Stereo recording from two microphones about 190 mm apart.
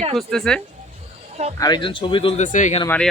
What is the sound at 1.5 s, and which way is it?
Speech, 20° left (ahead or behind).